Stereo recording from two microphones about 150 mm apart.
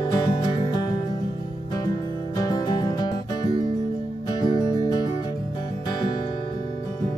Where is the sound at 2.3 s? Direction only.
25° left (ahead or behind).